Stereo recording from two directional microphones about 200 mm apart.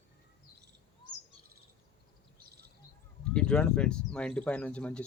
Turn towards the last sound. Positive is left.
turn(degrees=5)  # may be behind; listen again after turning